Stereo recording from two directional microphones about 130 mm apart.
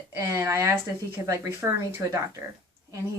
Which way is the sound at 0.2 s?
20° right (ahead or behind).